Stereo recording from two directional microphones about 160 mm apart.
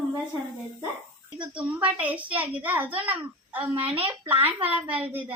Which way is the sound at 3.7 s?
35° right (ahead or behind).